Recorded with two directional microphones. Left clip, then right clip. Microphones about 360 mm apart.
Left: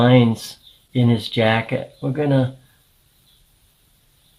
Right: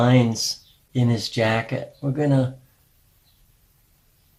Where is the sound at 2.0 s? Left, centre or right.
Centre.